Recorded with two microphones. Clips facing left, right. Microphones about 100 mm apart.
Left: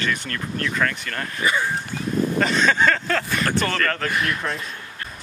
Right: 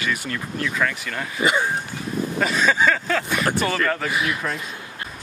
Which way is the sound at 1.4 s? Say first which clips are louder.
Right 2 dB; 20° right (ahead or behind).